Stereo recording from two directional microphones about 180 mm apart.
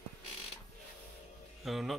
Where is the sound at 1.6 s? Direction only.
Centre (ahead or behind).